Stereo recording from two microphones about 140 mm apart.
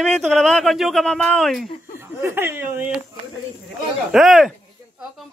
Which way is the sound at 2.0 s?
15° right (ahead or behind).